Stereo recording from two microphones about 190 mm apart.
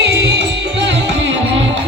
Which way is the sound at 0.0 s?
60° right (ahead or behind).